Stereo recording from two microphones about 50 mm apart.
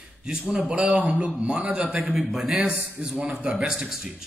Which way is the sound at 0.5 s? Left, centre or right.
Right.